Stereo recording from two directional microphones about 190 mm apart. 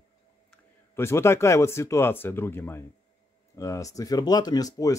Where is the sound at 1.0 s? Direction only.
15° left (ahead or behind).